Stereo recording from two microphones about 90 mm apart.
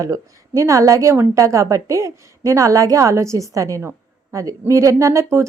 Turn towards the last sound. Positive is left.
turn(degrees=-35)  # may be behind; listen again after turning